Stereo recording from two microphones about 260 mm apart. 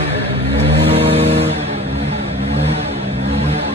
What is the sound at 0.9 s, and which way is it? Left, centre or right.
Vehicle, right.